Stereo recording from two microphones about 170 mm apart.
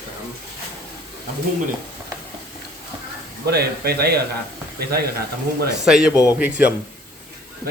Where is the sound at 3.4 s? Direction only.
70° right (ahead or behind).